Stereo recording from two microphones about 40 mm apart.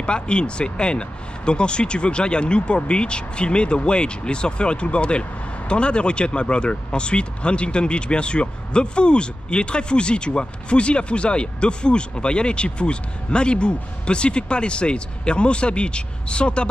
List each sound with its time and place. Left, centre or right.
0.0 s speech: left